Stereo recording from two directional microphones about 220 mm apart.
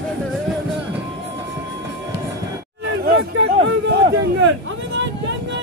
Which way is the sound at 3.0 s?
50° right (ahead or behind).